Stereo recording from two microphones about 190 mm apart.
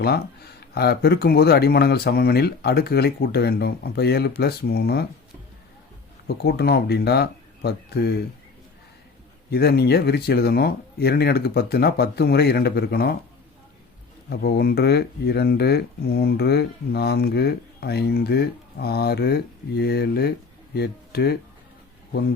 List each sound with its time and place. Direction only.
0.0 s speech: 55° left (ahead or behind)
6.2 s speech: 60° left (ahead or behind)
9.5 s speech: 55° left (ahead or behind)
14.3 s speech: 55° left (ahead or behind)